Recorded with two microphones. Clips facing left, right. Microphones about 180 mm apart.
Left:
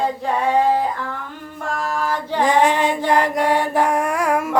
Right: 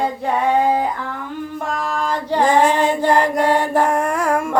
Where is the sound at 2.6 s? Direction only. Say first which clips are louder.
Right 2 dB; centre (ahead or behind).